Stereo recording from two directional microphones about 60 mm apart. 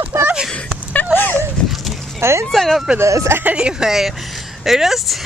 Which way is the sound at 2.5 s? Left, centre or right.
Centre.